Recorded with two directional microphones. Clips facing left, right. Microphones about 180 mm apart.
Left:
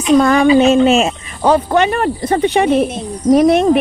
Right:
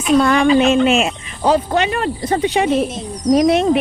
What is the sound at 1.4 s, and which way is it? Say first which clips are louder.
Speech: left 3 dB; 55° left (ahead or behind).